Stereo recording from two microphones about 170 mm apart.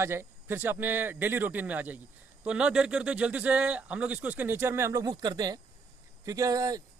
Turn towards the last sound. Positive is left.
turn(degrees=-20)  # may be behind; listen again after turning